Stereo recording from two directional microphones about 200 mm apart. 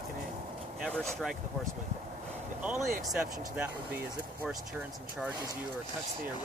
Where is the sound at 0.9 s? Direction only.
Centre (ahead or behind).